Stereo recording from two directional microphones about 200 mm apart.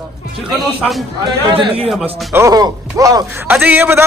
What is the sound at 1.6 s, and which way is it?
Speech, 25° right (ahead or behind).